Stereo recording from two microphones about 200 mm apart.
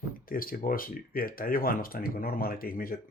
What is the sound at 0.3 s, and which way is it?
Speech, 45° left (ahead or behind).